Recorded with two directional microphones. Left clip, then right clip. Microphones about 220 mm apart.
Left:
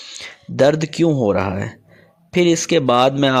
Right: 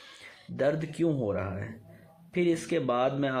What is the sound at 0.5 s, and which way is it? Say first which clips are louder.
Speech: left 13 dB; 45° left (ahead or behind).